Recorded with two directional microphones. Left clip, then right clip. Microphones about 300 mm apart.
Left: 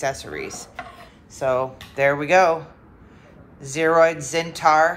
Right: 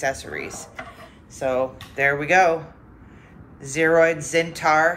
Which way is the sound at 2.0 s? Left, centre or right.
Centre.